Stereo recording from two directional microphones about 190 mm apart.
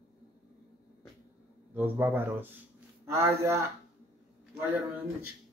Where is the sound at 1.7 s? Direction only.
10° right (ahead or behind).